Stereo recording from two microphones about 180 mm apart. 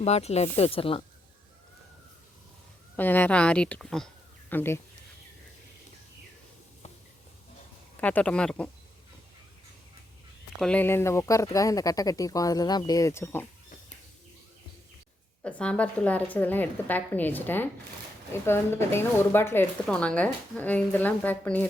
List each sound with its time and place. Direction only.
0.0 s speech: 35° left (ahead or behind)
2.9 s speech: 10° left (ahead or behind)
8.0 s speech: 5° left (ahead or behind)
10.6 s speech: 5° left (ahead or behind)
15.4 s speech: 5° left (ahead or behind)